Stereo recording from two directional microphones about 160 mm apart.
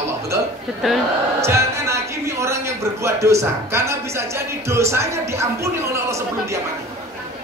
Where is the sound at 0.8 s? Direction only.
Centre (ahead or behind).